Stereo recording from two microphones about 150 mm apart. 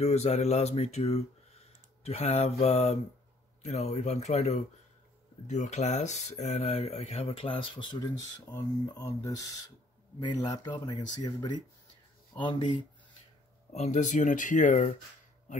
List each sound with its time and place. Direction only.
0.0 s speech: 45° left (ahead or behind); by 12.7 s 30° left (ahead or behind)
13.7 s speech: 50° left (ahead or behind)